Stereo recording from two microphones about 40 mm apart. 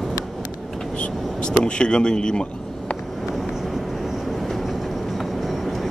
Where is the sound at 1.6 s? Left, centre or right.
Left.